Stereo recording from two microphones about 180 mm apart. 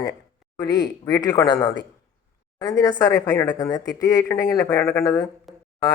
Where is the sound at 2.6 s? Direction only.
20° left (ahead or behind).